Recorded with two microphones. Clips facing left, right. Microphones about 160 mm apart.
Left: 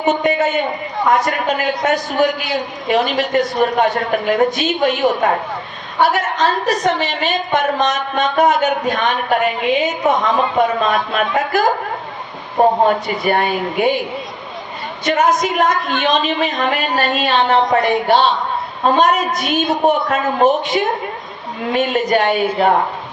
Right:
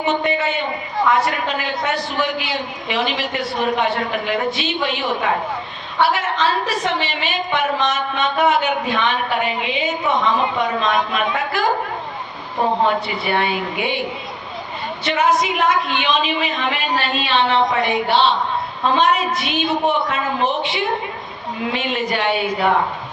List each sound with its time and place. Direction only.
0.3 s a woman's voice: 45° left (ahead or behind)
12.8 s a woman's voice: 45° left (ahead or behind)
15.0 s a woman's voice: 45° left (ahead or behind)